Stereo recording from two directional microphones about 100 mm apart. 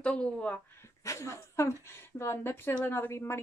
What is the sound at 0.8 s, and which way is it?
Speech, 30° left (ahead or behind).